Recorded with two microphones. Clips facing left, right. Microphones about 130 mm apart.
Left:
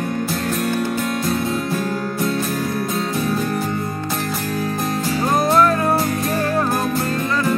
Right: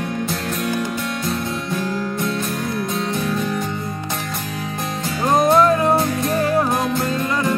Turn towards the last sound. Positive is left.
turn(degrees=-20)  # may be behind; listen again after turning